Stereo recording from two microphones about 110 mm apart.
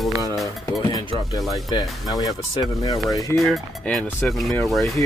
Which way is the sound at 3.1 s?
35° left (ahead or behind).